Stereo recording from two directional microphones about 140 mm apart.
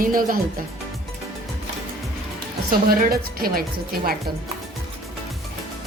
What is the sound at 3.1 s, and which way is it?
Speech, 90° right.